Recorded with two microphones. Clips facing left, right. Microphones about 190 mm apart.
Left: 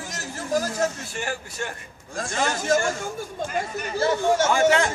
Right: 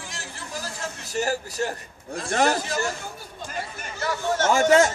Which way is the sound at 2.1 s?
65° right (ahead or behind).